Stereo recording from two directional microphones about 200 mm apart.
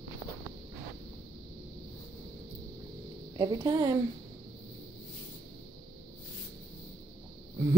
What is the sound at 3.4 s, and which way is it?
Speech, 15° right (ahead or behind).